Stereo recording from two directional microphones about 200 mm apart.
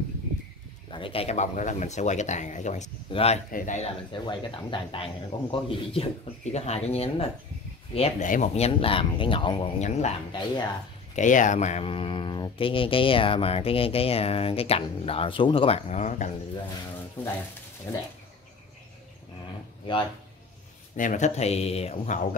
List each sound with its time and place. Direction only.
0.8 s speech: 25° left (ahead or behind)
4.1 s speech: 25° left (ahead or behind)
11.1 s speech: 40° left (ahead or behind)
17.2 s speech: 10° left (ahead or behind)
20.9 s speech: 40° left (ahead or behind)